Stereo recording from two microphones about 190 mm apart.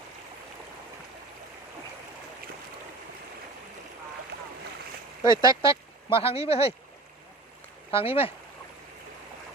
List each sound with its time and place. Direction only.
5.2 s speech: 25° left (ahead or behind)
7.9 s speech: 30° left (ahead or behind)